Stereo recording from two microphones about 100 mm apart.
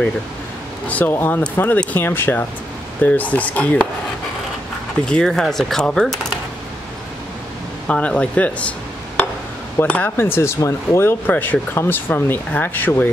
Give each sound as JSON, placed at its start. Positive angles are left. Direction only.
{"t": 0.8, "sound": "speech", "side_deg": 15}
{"t": 5.0, "sound": "speech", "side_deg": 10}
{"t": 7.9, "sound": "speech", "side_deg": 10}